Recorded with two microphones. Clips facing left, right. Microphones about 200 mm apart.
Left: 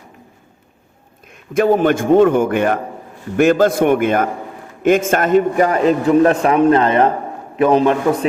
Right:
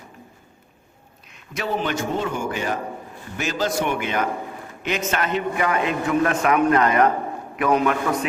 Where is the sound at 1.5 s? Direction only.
50° left (ahead or behind).